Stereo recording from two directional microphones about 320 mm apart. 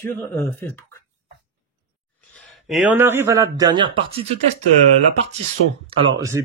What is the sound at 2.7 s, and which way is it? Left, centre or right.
Speech, centre.